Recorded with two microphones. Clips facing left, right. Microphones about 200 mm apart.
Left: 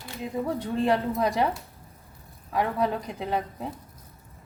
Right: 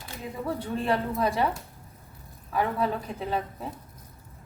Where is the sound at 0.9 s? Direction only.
15° left (ahead or behind).